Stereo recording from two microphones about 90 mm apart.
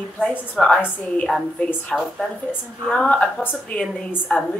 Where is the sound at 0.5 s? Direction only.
5° left (ahead or behind).